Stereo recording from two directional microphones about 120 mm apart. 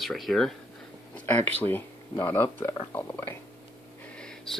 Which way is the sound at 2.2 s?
20° left (ahead or behind).